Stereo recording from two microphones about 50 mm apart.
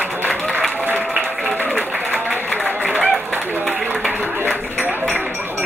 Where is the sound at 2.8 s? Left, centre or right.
Right.